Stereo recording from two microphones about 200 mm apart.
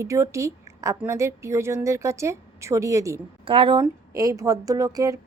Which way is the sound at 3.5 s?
25° right (ahead or behind).